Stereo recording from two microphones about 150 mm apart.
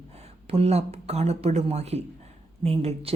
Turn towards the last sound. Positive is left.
turn(degrees=-40)  # may be behind; listen again after turning